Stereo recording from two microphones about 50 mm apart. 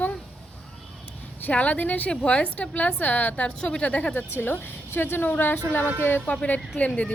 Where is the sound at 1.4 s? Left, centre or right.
Left.